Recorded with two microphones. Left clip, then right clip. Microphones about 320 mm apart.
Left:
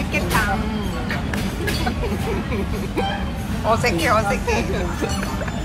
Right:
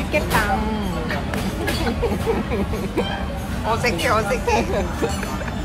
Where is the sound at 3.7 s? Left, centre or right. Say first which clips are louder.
Left 2 dB; centre.